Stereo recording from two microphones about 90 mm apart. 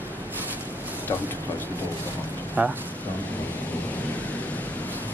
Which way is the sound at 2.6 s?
15° right (ahead or behind).